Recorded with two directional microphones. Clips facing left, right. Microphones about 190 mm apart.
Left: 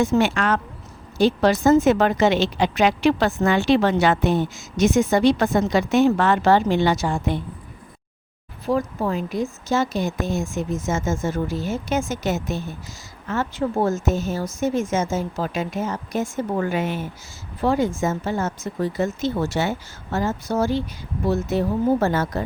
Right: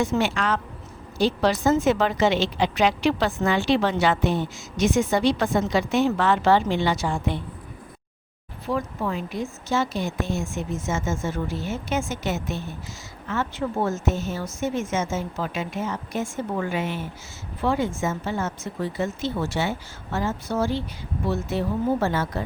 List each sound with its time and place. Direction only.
0.0 s a woman's voice: 50° left (ahead or behind)
8.6 s a woman's voice: 40° left (ahead or behind)